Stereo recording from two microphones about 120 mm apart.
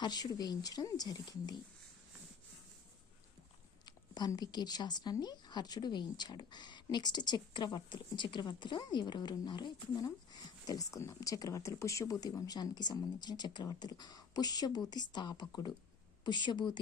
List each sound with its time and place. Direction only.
0.0 s a woman's voice: 35° left (ahead or behind)
3.8 s a woman's voice: 35° left (ahead or behind)